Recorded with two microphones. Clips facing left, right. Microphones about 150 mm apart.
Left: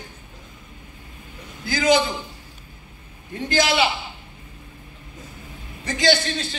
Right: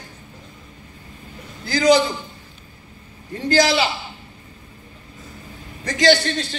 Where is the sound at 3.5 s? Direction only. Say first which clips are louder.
Right 3 dB; 40° right (ahead or behind).